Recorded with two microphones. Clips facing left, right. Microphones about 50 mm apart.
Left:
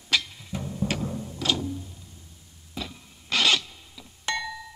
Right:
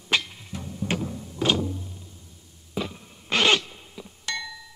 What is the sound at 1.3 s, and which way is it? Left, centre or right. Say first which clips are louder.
Music: right 5 dB; right.